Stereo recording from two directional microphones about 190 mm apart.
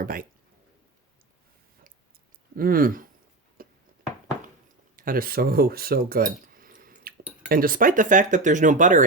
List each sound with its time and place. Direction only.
0.0 s speech: 50° right (ahead or behind)
2.6 s speech: 50° right (ahead or behind)
3.6 s a sound: 50° right (ahead or behind)
4.9 s speech: 50° right (ahead or behind)